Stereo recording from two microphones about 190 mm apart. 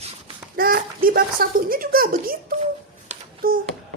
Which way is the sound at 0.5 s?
50° right (ahead or behind).